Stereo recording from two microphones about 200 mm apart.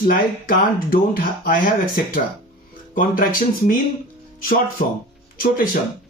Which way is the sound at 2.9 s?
45° left (ahead or behind).